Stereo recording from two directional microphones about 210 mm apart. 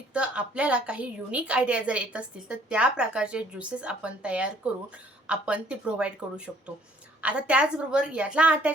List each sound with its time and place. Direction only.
0.1 s a woman's voice: 5° right (ahead or behind)